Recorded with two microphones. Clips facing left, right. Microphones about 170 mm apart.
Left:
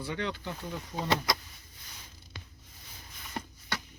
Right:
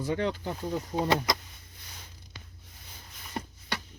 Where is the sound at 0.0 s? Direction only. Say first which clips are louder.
Right 5 dB; 40° right (ahead or behind).